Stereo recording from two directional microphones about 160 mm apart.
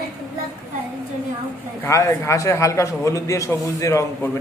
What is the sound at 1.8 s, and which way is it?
A man's voice, 20° left (ahead or behind).